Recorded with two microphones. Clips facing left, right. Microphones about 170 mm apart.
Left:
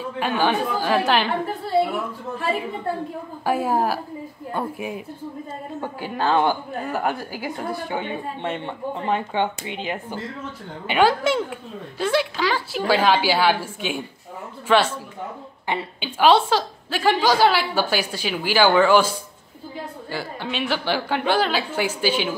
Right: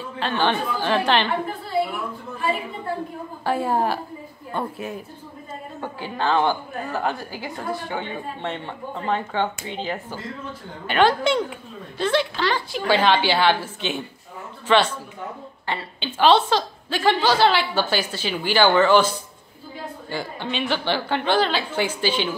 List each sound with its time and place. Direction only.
0.2 s a woman's voice: 10° left (ahead or behind)
3.4 s a woman's voice: 10° left (ahead or behind)
6.1 s a woman's voice: 15° left (ahead or behind)